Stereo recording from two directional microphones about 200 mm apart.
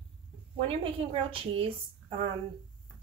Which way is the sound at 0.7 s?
25° right (ahead or behind).